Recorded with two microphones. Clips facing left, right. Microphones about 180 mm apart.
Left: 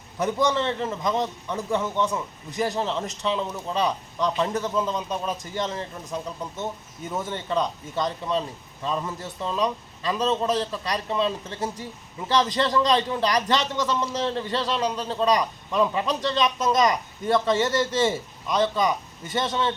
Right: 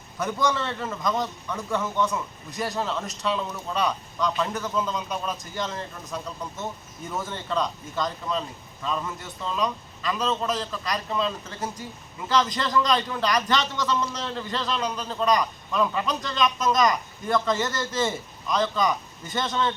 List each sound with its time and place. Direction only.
0.2 s a man's voice: 25° left (ahead or behind)